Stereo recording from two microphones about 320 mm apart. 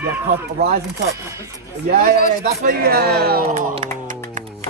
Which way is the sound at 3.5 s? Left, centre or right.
Centre.